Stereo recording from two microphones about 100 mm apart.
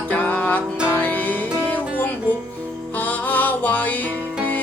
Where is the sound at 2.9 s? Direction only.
15° left (ahead or behind).